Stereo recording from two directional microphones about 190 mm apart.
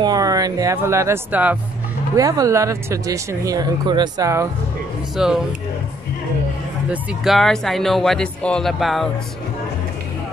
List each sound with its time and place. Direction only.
0.0 s speech: 20° right (ahead or behind)
5.1 s speech: centre (ahead or behind)
6.9 s speech: centre (ahead or behind)